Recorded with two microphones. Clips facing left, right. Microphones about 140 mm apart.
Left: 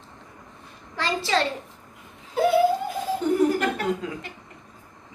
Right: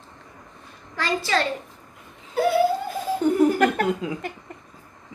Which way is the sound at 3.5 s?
50° right (ahead or behind).